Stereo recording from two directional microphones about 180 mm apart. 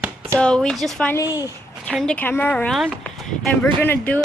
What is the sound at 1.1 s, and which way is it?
Speech, 20° left (ahead or behind).